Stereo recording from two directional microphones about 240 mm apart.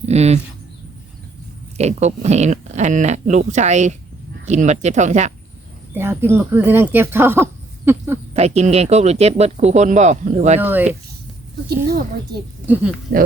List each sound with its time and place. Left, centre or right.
0.0 s speech: right
1.8 s speech: right
5.9 s speech: centre
8.3 s speech: right
10.6 s speech: centre
11.9 s a woman's voice: right
12.6 s speech: centre
13.1 s a woman's voice: right